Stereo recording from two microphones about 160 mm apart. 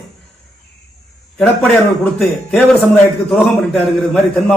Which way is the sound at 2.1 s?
5° left (ahead or behind).